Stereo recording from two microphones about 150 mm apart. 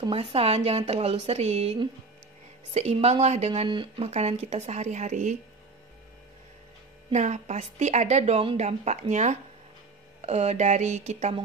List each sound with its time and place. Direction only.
0.0 s a woman's voice: 40° right (ahead or behind)
3.6 s speech: 35° right (ahead or behind)
4.1 s a woman's voice: 45° right (ahead or behind)
7.1 s a woman's voice: 50° right (ahead or behind)